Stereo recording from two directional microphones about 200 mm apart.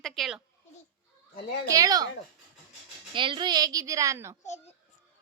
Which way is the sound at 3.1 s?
25° right (ahead or behind).